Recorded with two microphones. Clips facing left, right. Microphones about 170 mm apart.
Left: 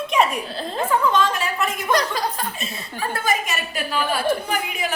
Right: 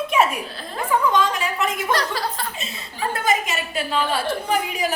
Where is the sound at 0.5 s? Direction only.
25° left (ahead or behind).